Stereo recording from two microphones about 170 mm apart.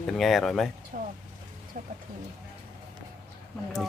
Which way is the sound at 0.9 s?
50° right (ahead or behind).